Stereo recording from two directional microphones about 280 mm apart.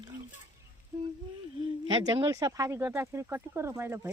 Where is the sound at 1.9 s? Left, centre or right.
Centre.